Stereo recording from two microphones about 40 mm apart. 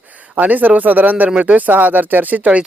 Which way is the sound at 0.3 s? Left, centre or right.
Right.